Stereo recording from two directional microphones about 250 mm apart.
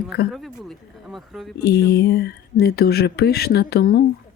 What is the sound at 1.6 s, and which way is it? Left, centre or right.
Speech, left.